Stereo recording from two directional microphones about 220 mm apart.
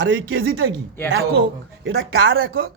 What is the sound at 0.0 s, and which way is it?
Speech, 55° right (ahead or behind).